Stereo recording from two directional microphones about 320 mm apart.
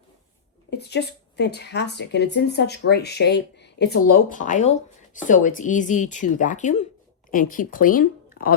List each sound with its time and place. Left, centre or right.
0.7 s speech: left